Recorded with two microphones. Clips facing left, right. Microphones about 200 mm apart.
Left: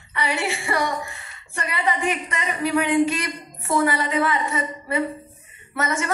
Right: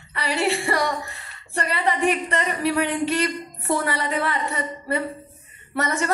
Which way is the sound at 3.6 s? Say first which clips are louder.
Left 3 dB; 35° right (ahead or behind).